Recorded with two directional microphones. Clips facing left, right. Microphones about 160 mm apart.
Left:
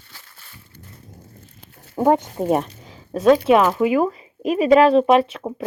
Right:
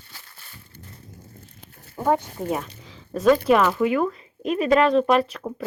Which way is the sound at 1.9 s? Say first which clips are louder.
Left 5 dB; 55° left (ahead or behind).